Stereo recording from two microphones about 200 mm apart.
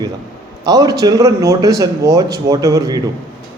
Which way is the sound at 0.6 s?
20° right (ahead or behind).